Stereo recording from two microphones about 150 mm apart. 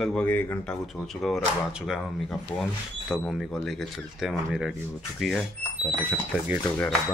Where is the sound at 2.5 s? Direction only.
10° left (ahead or behind).